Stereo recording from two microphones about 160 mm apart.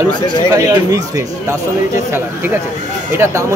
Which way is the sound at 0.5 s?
20° right (ahead or behind).